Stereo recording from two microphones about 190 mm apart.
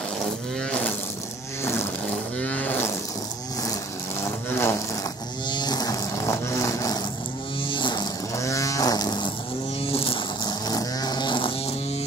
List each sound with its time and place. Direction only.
0.2 s wild animals: 5° left (ahead or behind)
1.6 s vehicle: 15° left (ahead or behind)
2.0 s wild animals: 5° left (ahead or behind)
4.2 s a sound: 15° left (ahead or behind)
9.8 s vehicle: 30° left (ahead or behind)